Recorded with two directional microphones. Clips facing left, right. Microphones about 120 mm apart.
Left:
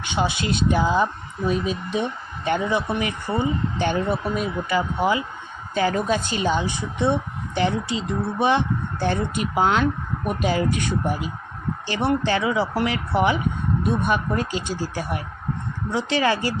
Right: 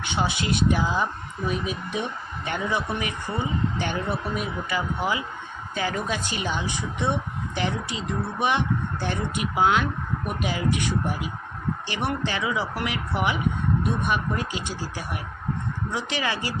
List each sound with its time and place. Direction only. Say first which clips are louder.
0.1 s speech: left 3 dB; 20° left (ahead or behind)
5.7 s a woman's voice: left 6 dB; 35° left (ahead or behind)
11.9 s a woman's voice: left 8 dB; 30° left (ahead or behind)